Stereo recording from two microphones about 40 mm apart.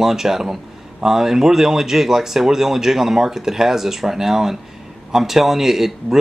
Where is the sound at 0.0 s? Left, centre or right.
Centre.